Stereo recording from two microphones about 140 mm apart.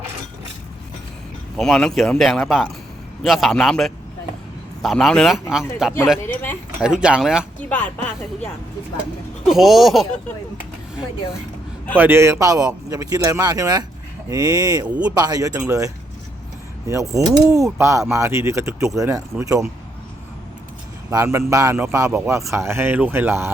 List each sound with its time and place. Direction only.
1.5 s speech: 5° left (ahead or behind)
6.2 s speech: 15° left (ahead or behind)
6.8 s speech: 5° right (ahead or behind)
7.7 s speech: 10° left (ahead or behind)
9.5 s speech: centre (ahead or behind)
11.9 s a man's voice: 15° right (ahead or behind)
14.8 s speech: 10° right (ahead or behind)
15.1 s a man's voice: 25° right (ahead or behind)
21.3 s a man's voice: 20° right (ahead or behind)